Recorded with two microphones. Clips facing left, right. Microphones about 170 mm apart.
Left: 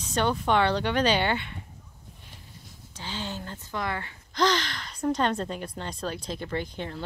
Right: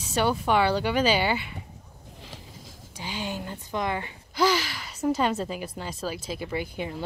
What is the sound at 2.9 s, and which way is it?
Speech, 10° right (ahead or behind).